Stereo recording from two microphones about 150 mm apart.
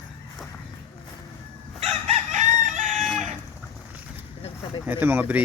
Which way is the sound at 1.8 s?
45° right (ahead or behind).